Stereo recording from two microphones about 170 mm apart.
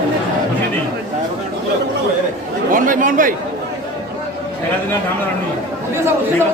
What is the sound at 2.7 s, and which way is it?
Chatter, 50° right (ahead or behind).